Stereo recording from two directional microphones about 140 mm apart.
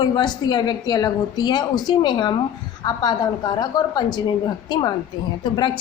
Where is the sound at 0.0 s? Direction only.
30° left (ahead or behind).